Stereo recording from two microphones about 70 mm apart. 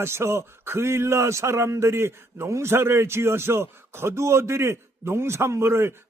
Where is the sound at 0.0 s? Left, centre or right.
Right.